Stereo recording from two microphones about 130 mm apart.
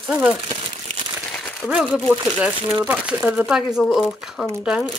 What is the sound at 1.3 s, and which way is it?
Crumpling, 15° left (ahead or behind).